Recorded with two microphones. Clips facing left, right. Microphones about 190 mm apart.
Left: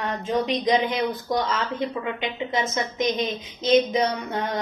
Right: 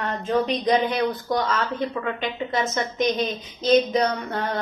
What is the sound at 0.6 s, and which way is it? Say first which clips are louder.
Speech: even; 15° left (ahead or behind).